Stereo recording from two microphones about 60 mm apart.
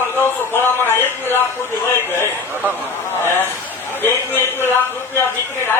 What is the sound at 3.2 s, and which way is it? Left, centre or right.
Speech, left.